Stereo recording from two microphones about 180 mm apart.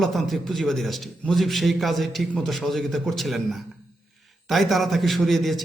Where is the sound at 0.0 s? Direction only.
Centre (ahead or behind).